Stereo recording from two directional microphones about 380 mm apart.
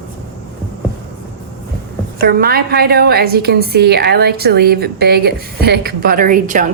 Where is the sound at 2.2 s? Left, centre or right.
Right.